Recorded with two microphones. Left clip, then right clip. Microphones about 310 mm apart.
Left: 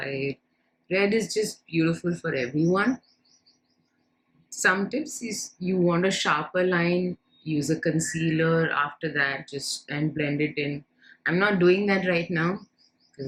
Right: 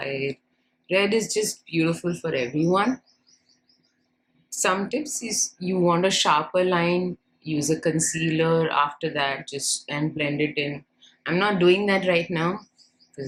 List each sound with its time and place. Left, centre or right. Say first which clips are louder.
0.9 s a woman's voice: right 2 dB; centre
4.4 s a woman's voice: left 1 dB; centre